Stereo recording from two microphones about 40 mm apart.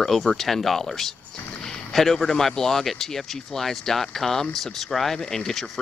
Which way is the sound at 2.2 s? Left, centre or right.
Centre.